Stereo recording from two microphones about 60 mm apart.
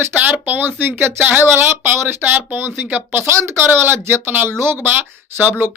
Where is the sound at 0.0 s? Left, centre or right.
Right.